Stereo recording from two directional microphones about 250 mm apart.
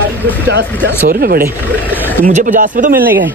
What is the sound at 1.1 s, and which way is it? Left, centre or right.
Speech, right.